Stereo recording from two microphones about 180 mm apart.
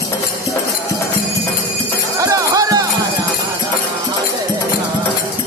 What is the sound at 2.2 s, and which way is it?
Music, 20° right (ahead or behind).